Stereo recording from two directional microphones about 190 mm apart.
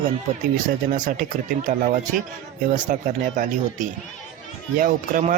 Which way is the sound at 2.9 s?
45° right (ahead or behind).